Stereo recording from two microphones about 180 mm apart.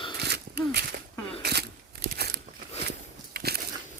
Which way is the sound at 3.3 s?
60° right (ahead or behind).